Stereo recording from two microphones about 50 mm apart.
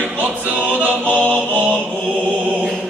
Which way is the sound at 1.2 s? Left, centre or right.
Right.